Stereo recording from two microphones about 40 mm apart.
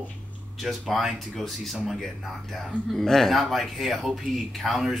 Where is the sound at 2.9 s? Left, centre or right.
Centre.